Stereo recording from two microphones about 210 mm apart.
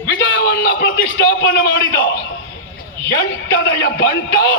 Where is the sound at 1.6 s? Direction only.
65° left (ahead or behind).